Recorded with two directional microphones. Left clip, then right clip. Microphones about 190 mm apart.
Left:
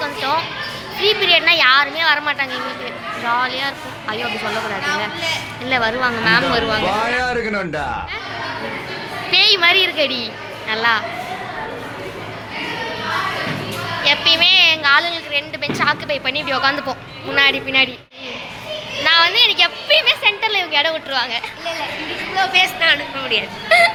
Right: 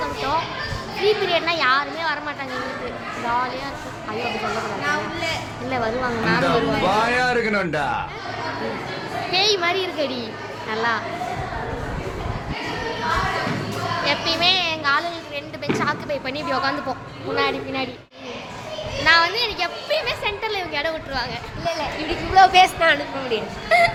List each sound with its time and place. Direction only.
1.0 s speech: centre (ahead or behind)
4.8 s a woman's voice: 60° right (ahead or behind)
5.6 s speech: centre (ahead or behind)
9.3 s a woman's voice: centre (ahead or behind)
14.0 s a woman's voice: 5° right (ahead or behind)
19.0 s speech: 5° right (ahead or behind)
22.4 s a woman's voice: 60° right (ahead or behind)
23.6 s music: centre (ahead or behind)